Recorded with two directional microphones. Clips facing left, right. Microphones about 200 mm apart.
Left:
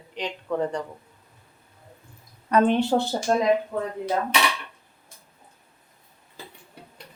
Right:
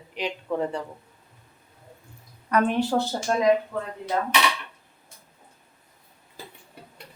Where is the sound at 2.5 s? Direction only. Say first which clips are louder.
Left 3 dB; 25° left (ahead or behind).